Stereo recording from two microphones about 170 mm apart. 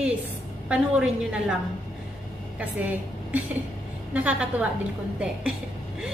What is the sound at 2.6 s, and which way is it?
Speech, 10° right (ahead or behind).